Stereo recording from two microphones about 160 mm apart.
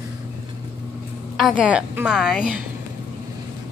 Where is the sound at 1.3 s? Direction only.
Centre (ahead or behind).